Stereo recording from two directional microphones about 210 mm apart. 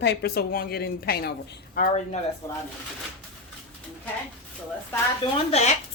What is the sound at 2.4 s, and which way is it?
Speech, 15° left (ahead or behind).